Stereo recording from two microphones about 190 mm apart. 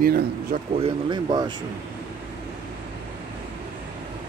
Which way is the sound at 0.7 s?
30° right (ahead or behind).